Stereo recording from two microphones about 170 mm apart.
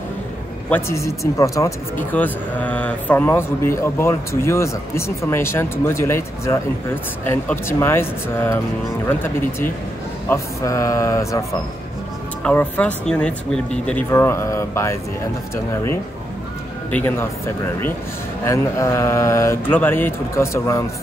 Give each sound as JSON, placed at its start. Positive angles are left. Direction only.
{"t": 0.7, "sound": "speech", "side_deg": 15}
{"t": 12.4, "sound": "speech", "side_deg": 10}
{"t": 18.4, "sound": "speech", "side_deg": 15}